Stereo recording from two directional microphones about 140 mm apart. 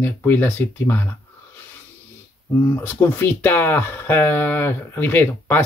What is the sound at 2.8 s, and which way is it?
Speech, 15° left (ahead or behind).